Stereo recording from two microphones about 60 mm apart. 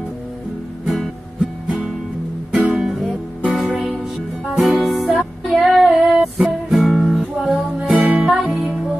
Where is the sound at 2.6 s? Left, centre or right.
Centre.